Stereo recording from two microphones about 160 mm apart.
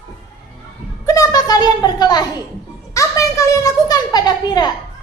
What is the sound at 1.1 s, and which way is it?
A woman's voice, 20° left (ahead or behind).